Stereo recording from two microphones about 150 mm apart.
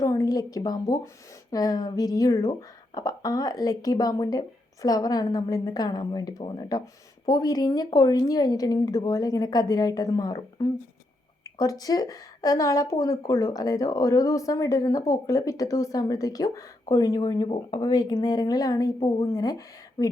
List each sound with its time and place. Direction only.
0.0 s a woman's voice: 20° left (ahead or behind)